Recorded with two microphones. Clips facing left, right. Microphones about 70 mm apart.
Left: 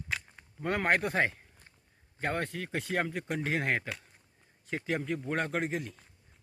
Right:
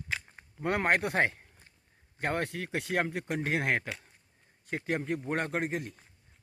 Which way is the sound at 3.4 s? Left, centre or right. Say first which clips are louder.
Right 1 dB; right.